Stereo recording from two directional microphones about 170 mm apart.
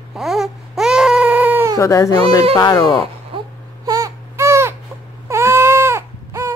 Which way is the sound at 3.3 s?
30° right (ahead or behind).